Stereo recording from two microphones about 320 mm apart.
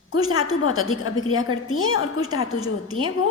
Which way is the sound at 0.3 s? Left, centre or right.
Left.